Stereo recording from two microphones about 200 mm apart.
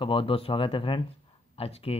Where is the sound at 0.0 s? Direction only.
25° left (ahead or behind).